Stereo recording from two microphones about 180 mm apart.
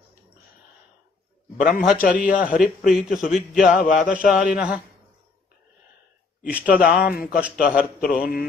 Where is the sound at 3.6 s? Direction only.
45° left (ahead or behind).